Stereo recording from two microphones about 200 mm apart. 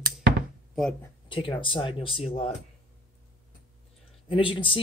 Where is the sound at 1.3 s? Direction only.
25° left (ahead or behind).